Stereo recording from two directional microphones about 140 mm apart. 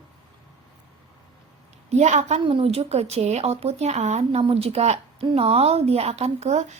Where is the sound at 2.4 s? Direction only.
40° right (ahead or behind).